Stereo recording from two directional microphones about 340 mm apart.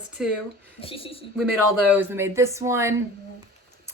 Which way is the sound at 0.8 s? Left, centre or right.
Centre.